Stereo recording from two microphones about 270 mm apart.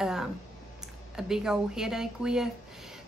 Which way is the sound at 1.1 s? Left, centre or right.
Centre.